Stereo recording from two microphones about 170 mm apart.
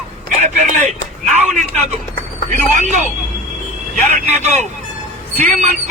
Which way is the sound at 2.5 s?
45° right (ahead or behind).